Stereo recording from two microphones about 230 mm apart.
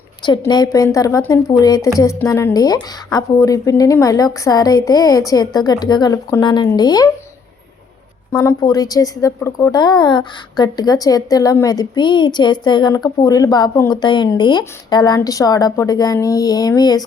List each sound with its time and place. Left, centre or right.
0.2 s a woman's voice: centre
8.3 s a woman's voice: centre